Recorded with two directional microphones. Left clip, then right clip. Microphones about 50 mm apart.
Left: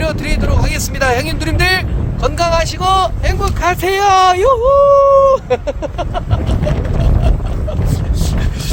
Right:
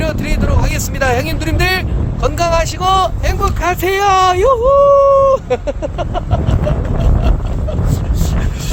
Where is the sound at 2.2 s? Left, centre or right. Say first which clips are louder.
Even; left.